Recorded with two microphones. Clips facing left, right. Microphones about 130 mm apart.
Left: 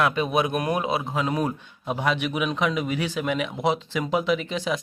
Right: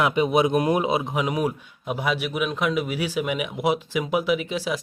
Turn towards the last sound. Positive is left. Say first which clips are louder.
# right 1 dB
turn(degrees=-5)  # may be behind; listen again after turning